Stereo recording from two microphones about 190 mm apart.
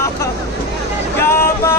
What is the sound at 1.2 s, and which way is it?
Vehicle, 15° left (ahead or behind).